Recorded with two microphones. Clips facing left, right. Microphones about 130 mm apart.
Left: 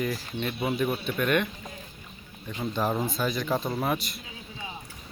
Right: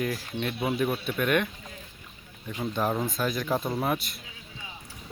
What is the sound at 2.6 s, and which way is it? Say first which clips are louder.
Speech: even; centre (ahead or behind).